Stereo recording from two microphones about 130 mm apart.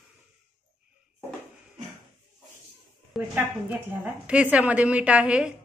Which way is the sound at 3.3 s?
15° right (ahead or behind).